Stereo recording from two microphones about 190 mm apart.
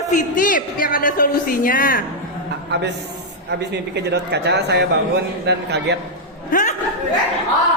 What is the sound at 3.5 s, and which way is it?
A man's voice, 65° right (ahead or behind).